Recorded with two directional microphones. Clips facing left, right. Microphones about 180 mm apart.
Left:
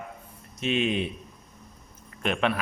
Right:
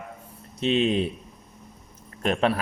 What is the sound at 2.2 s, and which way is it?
Speech, 35° right (ahead or behind).